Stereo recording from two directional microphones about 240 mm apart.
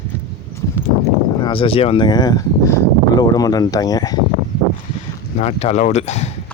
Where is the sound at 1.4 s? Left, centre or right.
Left.